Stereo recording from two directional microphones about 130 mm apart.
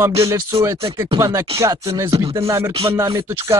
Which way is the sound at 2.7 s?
45° right (ahead or behind).